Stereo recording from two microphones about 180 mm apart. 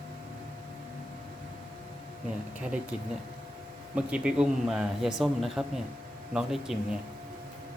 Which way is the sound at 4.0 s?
5° right (ahead or behind).